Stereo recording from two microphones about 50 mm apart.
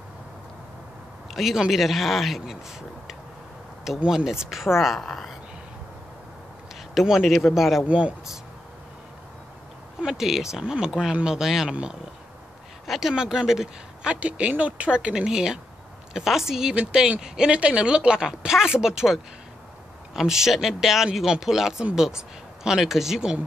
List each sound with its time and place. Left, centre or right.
1.3 s speech: centre
4.0 s speech: centre
6.9 s speech: centre
10.0 s speech: centre
12.8 s speech: centre
13.1 s speech: centre
14.5 s speech: right
20.2 s speech: centre